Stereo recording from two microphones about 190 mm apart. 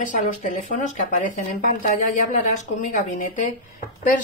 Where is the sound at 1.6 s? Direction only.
45° left (ahead or behind).